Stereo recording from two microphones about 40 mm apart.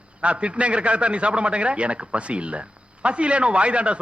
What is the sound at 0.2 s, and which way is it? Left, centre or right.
A man's voice, right.